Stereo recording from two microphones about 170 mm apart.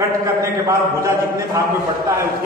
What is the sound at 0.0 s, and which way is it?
A man's voice, 20° right (ahead or behind).